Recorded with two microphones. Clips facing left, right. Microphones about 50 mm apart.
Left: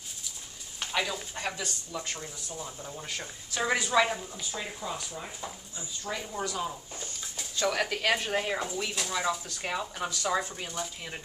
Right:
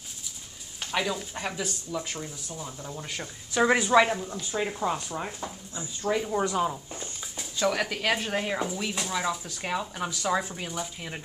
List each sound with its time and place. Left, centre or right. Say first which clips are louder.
0.9 s speech: right 3 dB; centre
3.6 s speech: right 5 dB; right
4.7 s speech: right 7 dB; right
6.0 s speech: right 8 dB; centre
7.3 s speech: right 2 dB; centre